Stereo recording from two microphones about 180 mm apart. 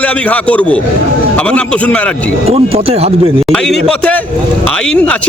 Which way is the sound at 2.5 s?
35° right (ahead or behind).